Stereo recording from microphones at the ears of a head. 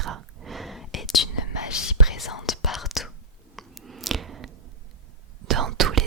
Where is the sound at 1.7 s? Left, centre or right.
Left.